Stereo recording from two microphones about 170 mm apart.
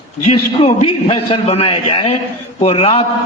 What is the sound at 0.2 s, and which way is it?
A man's voice, 35° left (ahead or behind).